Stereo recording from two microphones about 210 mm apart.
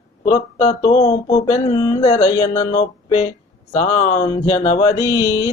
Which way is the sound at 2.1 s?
30° left (ahead or behind).